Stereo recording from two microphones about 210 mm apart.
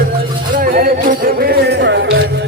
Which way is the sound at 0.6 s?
40° right (ahead or behind).